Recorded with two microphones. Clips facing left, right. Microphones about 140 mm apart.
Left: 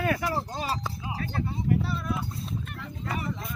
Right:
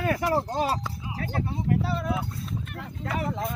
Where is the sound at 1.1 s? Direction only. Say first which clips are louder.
Right 3 dB; 70° right (ahead or behind); by 2.2 s 90° right.